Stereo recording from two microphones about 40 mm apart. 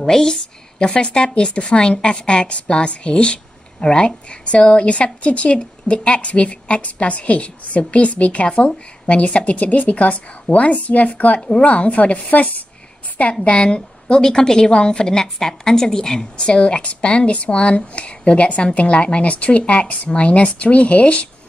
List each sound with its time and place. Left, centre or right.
0.0 s a woman's voice: centre; by 12.6 s left
13.3 s a woman's voice: left